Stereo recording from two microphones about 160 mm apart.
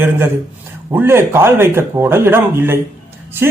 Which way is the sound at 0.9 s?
15° right (ahead or behind).